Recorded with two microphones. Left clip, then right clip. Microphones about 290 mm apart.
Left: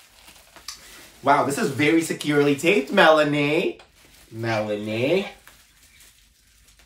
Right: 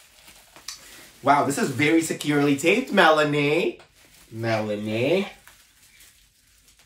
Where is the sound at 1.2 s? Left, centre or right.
Centre.